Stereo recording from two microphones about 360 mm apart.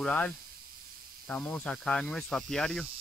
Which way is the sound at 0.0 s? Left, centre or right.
Centre.